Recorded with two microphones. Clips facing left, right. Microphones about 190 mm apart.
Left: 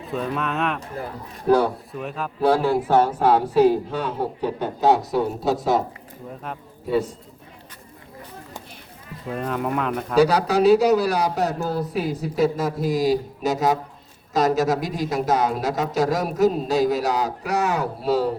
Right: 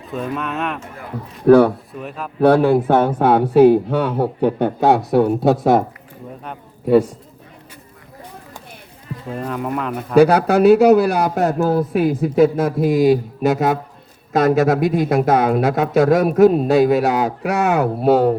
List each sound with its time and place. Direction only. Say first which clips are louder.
0.1 s speech: right 2 dB; centre (ahead or behind)
1.5 s speech: right 8 dB; 60° right (ahead or behind)
1.9 s speech: even; centre (ahead or behind)
2.4 s speech: right 6 dB; 60° right (ahead or behind)
9.3 s speech: right 1 dB; centre (ahead or behind)
10.2 s speech: right 6 dB; 55° right (ahead or behind)